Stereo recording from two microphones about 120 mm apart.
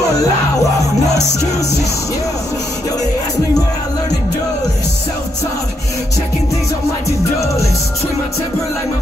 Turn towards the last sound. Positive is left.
turn(degrees=25)  # may be behind; listen again after turning